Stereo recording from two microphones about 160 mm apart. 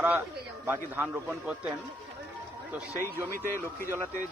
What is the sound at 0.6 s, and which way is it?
A man's voice, 10° right (ahead or behind).